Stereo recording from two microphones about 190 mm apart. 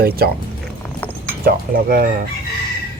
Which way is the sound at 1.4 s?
50° right (ahead or behind).